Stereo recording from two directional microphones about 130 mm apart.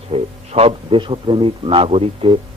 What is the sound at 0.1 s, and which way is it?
A man's voice, 50° right (ahead or behind).